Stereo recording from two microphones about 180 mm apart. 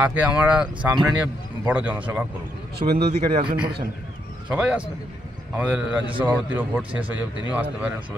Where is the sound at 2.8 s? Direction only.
40° right (ahead or behind).